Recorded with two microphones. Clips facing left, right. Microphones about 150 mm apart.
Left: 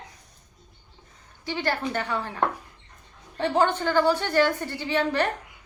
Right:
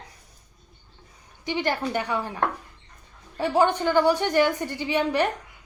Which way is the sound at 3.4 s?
15° right (ahead or behind).